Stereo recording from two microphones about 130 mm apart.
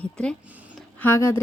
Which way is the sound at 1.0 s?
20° left (ahead or behind).